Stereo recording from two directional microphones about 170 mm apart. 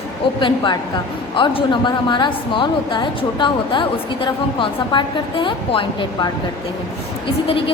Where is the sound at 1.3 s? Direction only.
30° left (ahead or behind).